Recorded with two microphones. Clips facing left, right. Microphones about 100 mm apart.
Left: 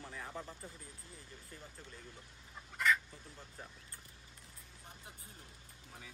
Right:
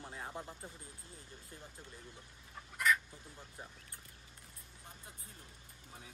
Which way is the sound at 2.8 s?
5° right (ahead or behind).